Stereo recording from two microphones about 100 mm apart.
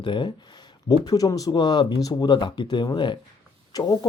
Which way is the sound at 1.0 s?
35° left (ahead or behind).